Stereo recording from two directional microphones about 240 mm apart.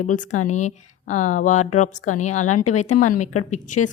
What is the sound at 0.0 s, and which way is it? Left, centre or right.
A woman's voice, left.